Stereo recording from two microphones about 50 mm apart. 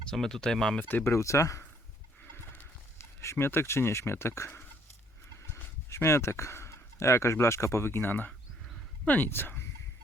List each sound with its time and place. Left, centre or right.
0.0 s speech: centre
0.8 s speech: left
1.0 s speech: left
3.3 s speech: left
5.9 s speech: left
9.0 s speech: left
9.3 s speech: left